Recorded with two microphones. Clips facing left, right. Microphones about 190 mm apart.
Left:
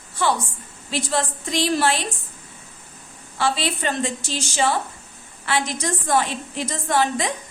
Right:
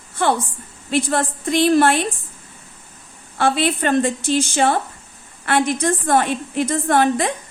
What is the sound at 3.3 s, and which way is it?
A woman's voice, 55° right (ahead or behind).